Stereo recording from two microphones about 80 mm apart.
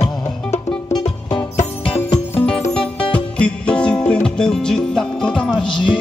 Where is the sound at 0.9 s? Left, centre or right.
Left.